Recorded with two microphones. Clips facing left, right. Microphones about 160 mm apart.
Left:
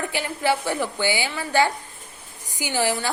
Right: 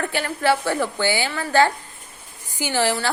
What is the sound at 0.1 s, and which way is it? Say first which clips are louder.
A woman's voice: right 2 dB; 15° left (ahead or behind).